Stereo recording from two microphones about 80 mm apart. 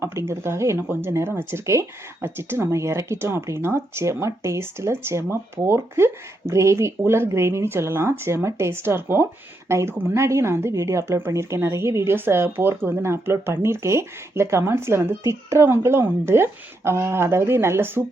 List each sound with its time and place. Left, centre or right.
0.0 s a woman's voice: right